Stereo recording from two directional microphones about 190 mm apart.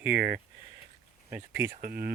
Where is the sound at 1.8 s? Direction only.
55° right (ahead or behind).